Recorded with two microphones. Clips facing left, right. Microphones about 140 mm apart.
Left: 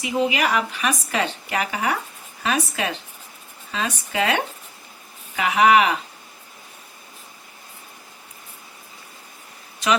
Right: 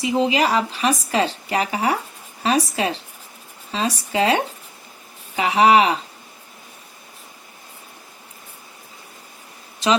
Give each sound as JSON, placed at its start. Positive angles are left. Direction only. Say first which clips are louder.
{"t": 0.0, "sound": "speech", "louder": "right 3 dB", "side_deg": -30}
{"t": 9.8, "sound": "speech", "louder": "right 2 dB", "side_deg": -30}